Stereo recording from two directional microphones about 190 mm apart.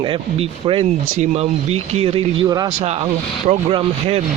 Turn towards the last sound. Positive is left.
turn(degrees=-30)  # may be behind; listen again after turning